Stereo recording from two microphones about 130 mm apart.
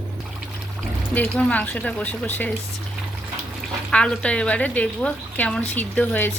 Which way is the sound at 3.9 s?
10° left (ahead or behind).